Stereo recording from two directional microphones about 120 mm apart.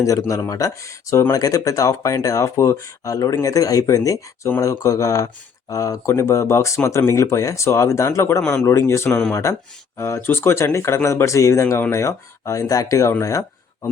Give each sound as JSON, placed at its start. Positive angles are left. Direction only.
{"t": 0.0, "sound": "speech", "side_deg": 25}
{"t": 8.4, "sound": "speech", "side_deg": 10}
{"t": 8.6, "sound": "speech", "side_deg": 25}
{"t": 9.0, "sound": "speech", "side_deg": 10}
{"t": 9.3, "sound": "speech", "side_deg": 25}